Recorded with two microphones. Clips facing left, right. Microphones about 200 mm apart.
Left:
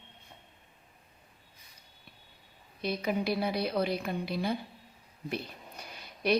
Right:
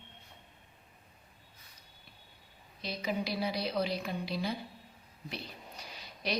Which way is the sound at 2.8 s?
55° left (ahead or behind).